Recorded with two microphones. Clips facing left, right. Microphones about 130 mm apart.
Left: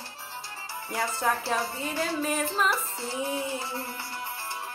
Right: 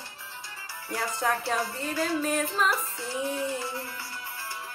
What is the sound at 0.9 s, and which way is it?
Music, centre (ahead or behind).